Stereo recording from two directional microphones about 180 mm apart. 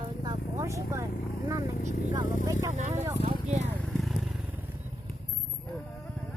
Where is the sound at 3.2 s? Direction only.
35° right (ahead or behind).